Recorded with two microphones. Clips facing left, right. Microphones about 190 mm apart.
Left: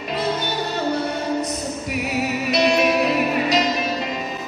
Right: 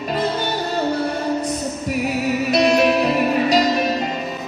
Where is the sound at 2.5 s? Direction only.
35° right (ahead or behind).